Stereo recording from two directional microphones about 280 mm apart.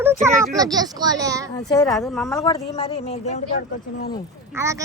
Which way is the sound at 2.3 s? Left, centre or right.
Centre.